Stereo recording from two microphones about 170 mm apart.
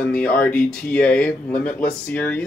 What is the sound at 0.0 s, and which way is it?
Speech, 5° left (ahead or behind).